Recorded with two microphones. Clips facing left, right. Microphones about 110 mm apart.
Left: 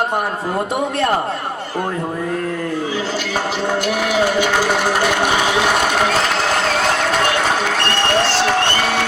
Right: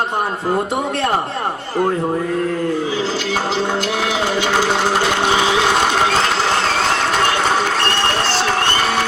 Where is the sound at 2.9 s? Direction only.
30° right (ahead or behind).